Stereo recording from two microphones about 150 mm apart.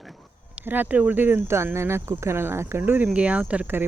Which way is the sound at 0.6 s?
10° right (ahead or behind).